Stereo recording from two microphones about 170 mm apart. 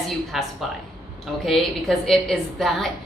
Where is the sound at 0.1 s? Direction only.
Centre (ahead or behind).